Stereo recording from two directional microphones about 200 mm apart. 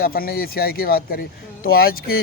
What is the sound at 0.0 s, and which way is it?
Speech, 50° left (ahead or behind).